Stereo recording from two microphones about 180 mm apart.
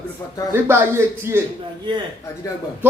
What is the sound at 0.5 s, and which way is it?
Speech, 15° right (ahead or behind).